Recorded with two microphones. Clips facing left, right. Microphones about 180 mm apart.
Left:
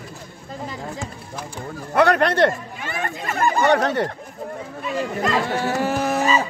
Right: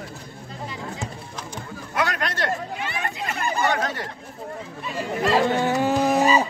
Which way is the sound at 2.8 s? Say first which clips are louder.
Left 6 dB; 45° left (ahead or behind).